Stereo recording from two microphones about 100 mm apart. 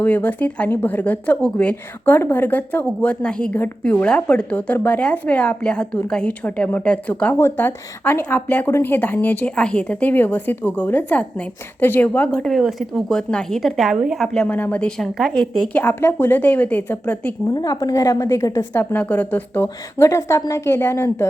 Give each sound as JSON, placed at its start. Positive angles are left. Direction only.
{"t": 0.0, "sound": "speech", "side_deg": 15}
{"t": 12.5, "sound": "a woman's voice", "side_deg": 0}
{"t": 14.4, "sound": "speech", "side_deg": 20}
{"t": 15.7, "sound": "speech", "side_deg": 20}
{"t": 17.5, "sound": "a woman's voice", "side_deg": 40}
{"t": 18.7, "sound": "a woman's voice", "side_deg": 20}